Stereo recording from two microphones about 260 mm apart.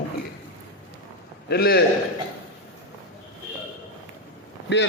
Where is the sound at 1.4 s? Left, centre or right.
Left.